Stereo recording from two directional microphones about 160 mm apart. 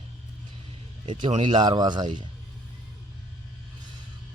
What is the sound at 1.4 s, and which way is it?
Speech, 25° right (ahead or behind).